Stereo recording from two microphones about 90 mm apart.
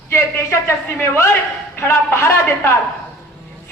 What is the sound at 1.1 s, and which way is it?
A man's voice, 25° left (ahead or behind).